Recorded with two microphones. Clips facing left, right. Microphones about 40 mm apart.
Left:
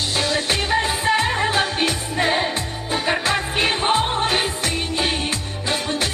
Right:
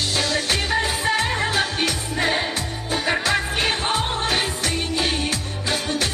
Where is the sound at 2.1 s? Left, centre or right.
Centre.